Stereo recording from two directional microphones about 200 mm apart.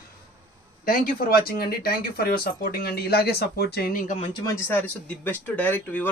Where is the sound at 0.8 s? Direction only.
45° left (ahead or behind).